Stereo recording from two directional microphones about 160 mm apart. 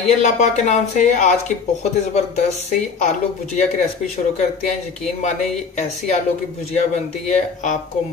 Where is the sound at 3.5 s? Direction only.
50° left (ahead or behind).